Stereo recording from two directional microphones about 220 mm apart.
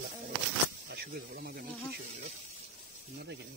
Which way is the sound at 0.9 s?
45° right (ahead or behind).